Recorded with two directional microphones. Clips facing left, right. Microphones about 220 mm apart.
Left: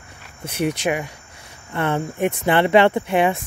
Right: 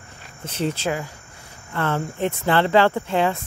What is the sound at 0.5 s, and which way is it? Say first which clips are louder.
Speech: left 3 dB; 15° left (ahead or behind).